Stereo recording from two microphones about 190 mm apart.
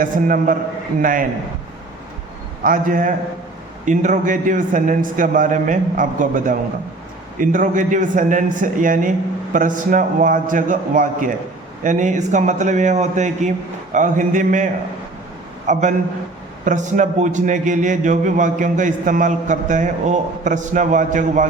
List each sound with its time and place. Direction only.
0.0 s a man's voice: 45° right (ahead or behind)
2.6 s a man's voice: 45° right (ahead or behind)